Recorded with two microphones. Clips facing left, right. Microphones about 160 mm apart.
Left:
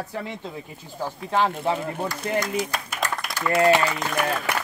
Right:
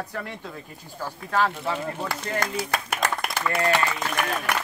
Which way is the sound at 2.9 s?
60° right (ahead or behind).